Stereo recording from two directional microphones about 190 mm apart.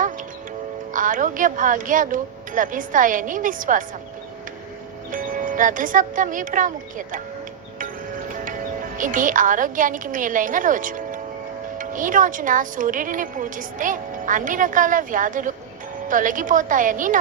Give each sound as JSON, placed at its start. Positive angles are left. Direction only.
{"t": 0.9, "sound": "speech", "side_deg": -45}
{"t": 5.1, "sound": "speech", "side_deg": -45}
{"t": 9.0, "sound": "speech", "side_deg": -45}